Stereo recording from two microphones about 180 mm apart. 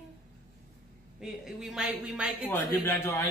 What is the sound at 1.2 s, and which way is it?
Speech, 5° right (ahead or behind).